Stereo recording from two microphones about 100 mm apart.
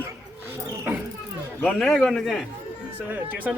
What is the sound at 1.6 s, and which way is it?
Speech, 5° left (ahead or behind).